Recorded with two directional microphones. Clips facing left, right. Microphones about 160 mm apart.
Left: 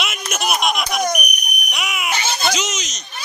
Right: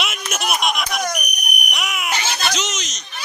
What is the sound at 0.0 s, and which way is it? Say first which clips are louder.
Baby laughter: left 1 dB; centre (ahead or behind).